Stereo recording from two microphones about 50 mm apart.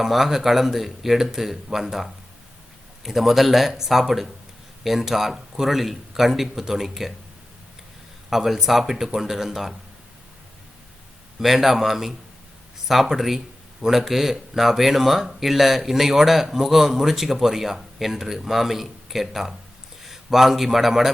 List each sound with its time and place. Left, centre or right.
0.0 s speech: centre
8.3 s speech: centre
11.3 s a man's voice: centre